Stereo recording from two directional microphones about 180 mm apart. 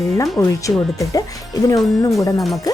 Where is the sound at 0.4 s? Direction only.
15° left (ahead or behind).